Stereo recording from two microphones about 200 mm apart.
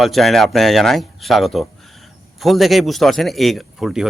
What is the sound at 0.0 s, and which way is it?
A man's voice, centre (ahead or behind).